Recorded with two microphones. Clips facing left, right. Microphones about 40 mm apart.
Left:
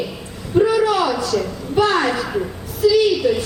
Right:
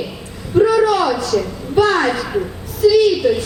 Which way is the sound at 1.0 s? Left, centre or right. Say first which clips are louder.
Right 2 dB; centre.